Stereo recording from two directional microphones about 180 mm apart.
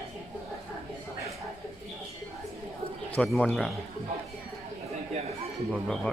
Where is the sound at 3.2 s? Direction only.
5° left (ahead or behind).